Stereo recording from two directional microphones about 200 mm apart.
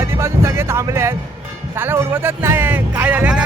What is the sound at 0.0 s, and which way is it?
Speech, 15° right (ahead or behind).